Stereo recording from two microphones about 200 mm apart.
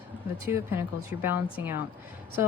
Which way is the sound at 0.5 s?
10° right (ahead or behind).